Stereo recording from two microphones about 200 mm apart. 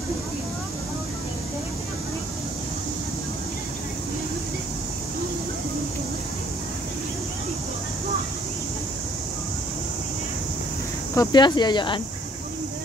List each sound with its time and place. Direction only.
11.1 s speech: 20° left (ahead or behind)